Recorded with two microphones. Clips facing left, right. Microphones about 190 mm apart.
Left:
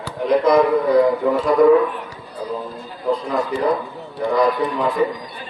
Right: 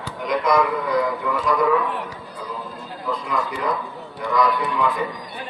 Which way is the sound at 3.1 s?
30° left (ahead or behind).